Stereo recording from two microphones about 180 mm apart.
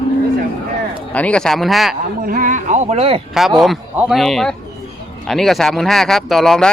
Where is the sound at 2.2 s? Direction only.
50° right (ahead or behind).